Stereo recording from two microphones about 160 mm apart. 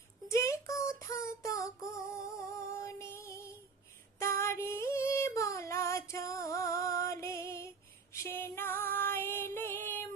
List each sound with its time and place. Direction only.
0.3 s child singing: 20° left (ahead or behind)
4.2 s female singing: 15° left (ahead or behind)